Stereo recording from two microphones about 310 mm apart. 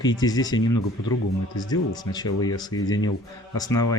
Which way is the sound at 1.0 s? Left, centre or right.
Left.